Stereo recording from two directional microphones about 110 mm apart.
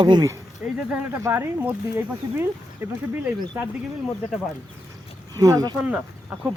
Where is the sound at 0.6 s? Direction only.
15° right (ahead or behind).